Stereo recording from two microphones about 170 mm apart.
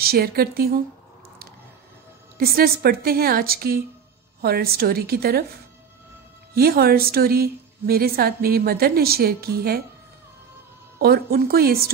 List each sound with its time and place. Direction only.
0.0 s a woman's voice: 65° right (ahead or behind)
2.3 s a woman's voice: 60° right (ahead or behind)
6.5 s a woman's voice: 65° right (ahead or behind)
11.0 s a woman's voice: 65° right (ahead or behind)